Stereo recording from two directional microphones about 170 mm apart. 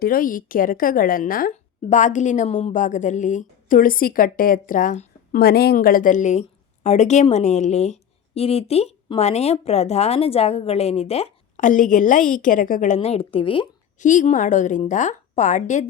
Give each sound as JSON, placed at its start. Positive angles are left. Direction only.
{"t": 0.0, "sound": "a woman's voice", "side_deg": 55}
{"t": 14.0, "sound": "a woman's voice", "side_deg": 45}